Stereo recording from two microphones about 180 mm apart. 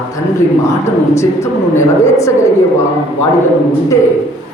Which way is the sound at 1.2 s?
15° left (ahead or behind).